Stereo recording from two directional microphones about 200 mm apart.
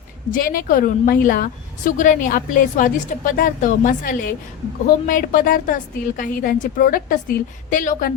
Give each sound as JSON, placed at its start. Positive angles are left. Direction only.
{"t": 0.3, "sound": "a woman's voice", "side_deg": 45}